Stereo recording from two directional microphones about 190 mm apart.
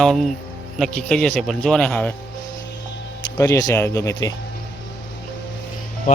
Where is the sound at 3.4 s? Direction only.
15° left (ahead or behind).